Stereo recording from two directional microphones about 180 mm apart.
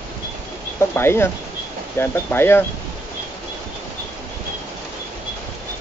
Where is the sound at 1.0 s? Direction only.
15° left (ahead or behind).